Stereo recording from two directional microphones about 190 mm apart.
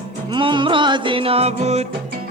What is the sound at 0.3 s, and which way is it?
Music, 25° right (ahead or behind).